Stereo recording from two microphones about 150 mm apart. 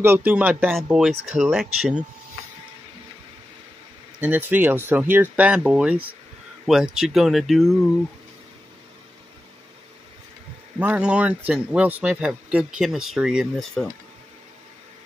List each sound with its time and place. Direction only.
0.0 s speech: 15° right (ahead or behind)
4.2 s speech: 10° right (ahead or behind)
10.8 s speech: 10° right (ahead or behind)